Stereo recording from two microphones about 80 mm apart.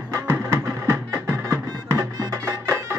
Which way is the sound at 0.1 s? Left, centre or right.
Right.